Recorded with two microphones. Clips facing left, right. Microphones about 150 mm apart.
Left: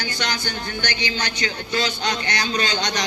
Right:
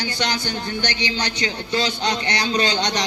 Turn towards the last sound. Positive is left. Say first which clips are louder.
# right 3 dB
turn(degrees=-30)  # may be behind; listen again after turning